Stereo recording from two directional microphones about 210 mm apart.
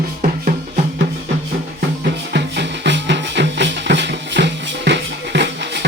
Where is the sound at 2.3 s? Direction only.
55° right (ahead or behind).